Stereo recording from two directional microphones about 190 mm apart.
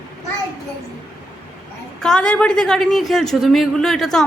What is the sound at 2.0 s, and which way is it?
A woman's voice, 5° left (ahead or behind).